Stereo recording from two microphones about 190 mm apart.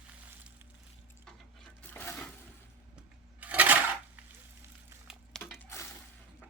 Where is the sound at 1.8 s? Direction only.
10° left (ahead or behind).